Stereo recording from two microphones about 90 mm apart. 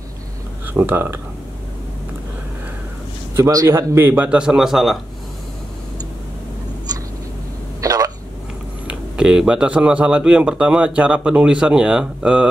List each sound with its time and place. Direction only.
0.7 s a man's voice: 20° right (ahead or behind)
3.3 s a man's voice: 35° right (ahead or behind); by 4.9 s 5° right (ahead or behind)
7.8 s a sound: 45° right (ahead or behind)
8.8 s speech: 10° right (ahead or behind)